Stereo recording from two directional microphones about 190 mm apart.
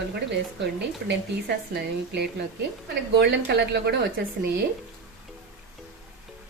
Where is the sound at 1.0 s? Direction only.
60° right (ahead or behind).